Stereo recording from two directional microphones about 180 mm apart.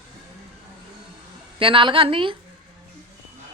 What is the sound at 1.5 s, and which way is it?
Speech, 30° right (ahead or behind).